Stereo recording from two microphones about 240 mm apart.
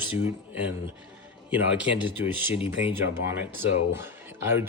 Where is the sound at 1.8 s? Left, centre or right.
Centre.